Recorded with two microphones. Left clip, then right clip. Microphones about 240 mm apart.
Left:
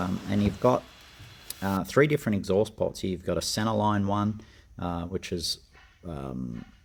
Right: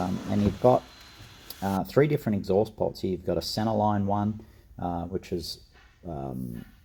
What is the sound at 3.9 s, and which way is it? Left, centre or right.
Speech, centre.